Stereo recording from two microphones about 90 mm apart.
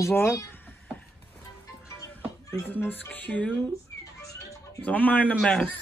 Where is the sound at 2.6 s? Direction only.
20° left (ahead or behind).